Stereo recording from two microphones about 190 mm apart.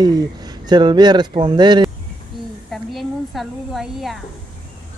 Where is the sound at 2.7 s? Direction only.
Centre (ahead or behind).